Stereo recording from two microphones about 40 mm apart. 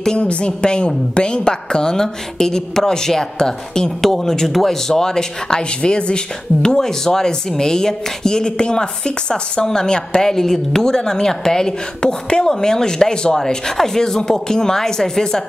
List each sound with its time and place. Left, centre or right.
0.2 s speech: left
10.3 s speech: centre